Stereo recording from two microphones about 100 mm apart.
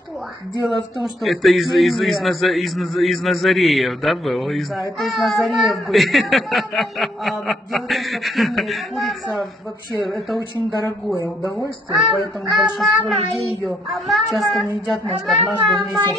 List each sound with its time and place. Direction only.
1.2 s a man's voice: centre (ahead or behind)
11.1 s speech: 35° left (ahead or behind)
11.9 s a man's voice: centre (ahead or behind)